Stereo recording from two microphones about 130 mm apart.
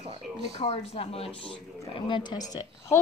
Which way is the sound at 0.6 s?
50° left (ahead or behind).